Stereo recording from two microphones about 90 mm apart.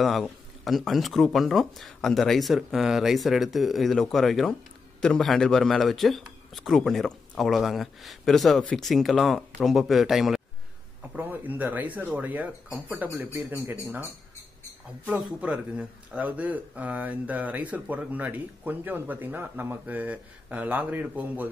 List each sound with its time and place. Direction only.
0.0 s speech: centre (ahead or behind)
11.1 s speech: 20° right (ahead or behind)
15.0 s speech: 15° right (ahead or behind)